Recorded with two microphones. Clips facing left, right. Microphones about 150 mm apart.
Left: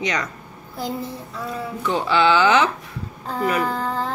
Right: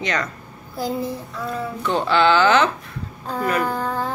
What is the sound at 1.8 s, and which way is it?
A woman's voice, 5° left (ahead or behind).